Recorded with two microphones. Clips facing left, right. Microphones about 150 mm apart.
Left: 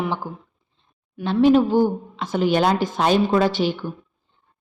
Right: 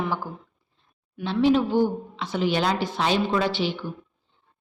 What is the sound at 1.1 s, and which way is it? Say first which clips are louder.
A woman's voice: left 5 dB; 50° left (ahead or behind).